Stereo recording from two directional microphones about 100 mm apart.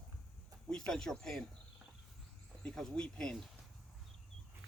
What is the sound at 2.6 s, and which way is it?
Speech, 5° left (ahead or behind).